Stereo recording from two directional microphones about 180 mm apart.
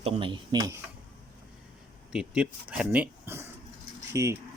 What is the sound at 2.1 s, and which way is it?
Speech, 5° right (ahead or behind).